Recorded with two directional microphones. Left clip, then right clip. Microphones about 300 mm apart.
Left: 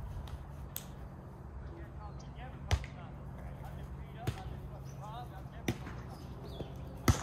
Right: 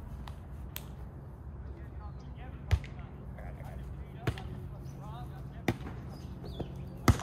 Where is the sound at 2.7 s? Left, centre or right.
Left.